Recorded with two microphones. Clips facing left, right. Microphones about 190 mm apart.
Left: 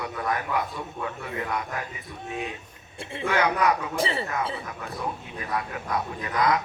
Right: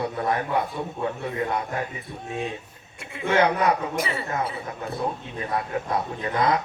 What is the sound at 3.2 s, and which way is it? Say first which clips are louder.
Speech: right 3 dB; 25° right (ahead or behind).